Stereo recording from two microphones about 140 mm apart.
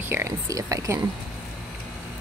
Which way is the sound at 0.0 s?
20° right (ahead or behind).